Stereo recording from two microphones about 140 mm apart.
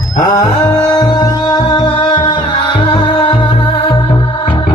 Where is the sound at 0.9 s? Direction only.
25° left (ahead or behind).